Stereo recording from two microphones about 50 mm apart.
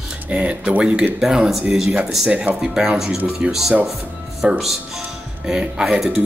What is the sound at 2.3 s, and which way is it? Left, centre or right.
Speech, right.